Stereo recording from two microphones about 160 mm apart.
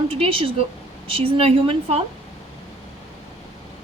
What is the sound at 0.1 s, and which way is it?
A woman's voice, 35° right (ahead or behind).